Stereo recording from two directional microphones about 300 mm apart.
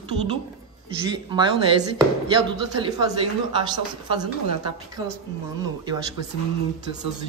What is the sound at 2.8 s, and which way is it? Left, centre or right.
A man's voice, centre.